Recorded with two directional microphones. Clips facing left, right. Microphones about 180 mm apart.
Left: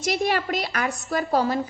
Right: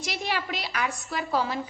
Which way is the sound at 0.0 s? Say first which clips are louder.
Left 7 dB; 45° left (ahead or behind).